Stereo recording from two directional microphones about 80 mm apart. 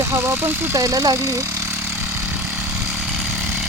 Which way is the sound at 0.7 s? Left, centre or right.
Right.